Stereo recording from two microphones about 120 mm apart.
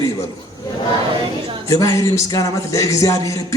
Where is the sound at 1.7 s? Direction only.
25° left (ahead or behind).